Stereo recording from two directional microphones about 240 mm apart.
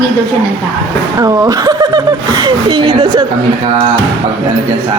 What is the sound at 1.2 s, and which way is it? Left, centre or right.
Speech, centre.